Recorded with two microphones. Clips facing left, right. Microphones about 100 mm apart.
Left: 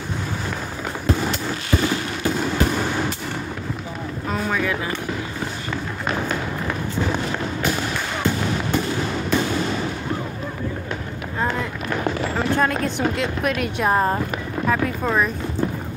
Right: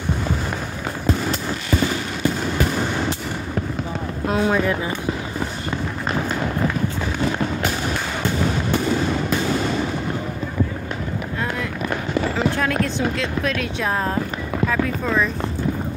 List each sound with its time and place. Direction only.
12.5 s speech: 15° left (ahead or behind)